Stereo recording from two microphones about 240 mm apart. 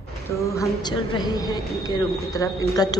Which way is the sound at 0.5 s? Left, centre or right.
Centre.